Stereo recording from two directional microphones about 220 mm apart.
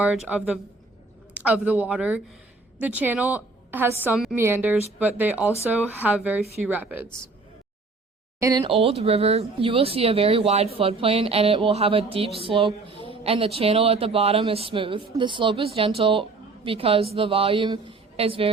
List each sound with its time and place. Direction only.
0.0 s a woman's voice: 5° right (ahead or behind)
8.4 s speech: 15° right (ahead or behind)
8.6 s speech: 25° right (ahead or behind)